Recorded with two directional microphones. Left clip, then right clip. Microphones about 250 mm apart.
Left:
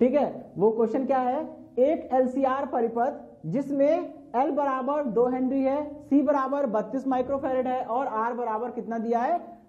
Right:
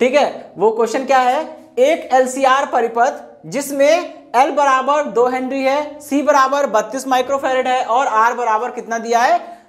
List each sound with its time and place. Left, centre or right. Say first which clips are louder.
0.0 s a woman's voice: right 9 dB; centre